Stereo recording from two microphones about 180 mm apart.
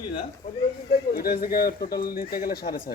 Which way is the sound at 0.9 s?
55° left (ahead or behind).